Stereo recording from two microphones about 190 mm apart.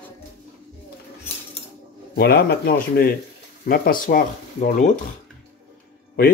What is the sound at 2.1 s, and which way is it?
Speech, 55° left (ahead or behind).